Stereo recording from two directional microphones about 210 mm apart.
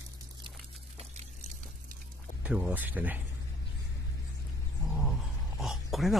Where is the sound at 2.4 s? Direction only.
5° right (ahead or behind).